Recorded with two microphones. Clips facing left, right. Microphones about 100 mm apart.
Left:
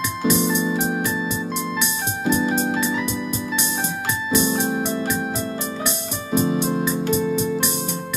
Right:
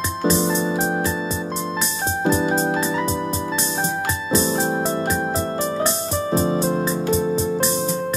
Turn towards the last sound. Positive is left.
turn(degrees=-35)  # may be behind; listen again after turning